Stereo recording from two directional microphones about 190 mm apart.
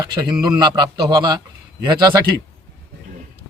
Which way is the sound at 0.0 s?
25° right (ahead or behind).